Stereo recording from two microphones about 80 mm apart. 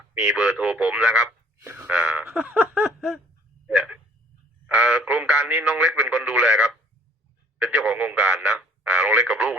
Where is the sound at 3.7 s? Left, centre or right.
Centre.